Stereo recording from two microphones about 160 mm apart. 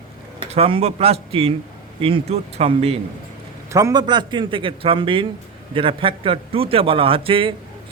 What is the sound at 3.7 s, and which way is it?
A man's voice, 20° right (ahead or behind).